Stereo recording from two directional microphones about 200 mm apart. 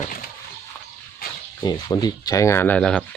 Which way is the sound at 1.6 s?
20° left (ahead or behind).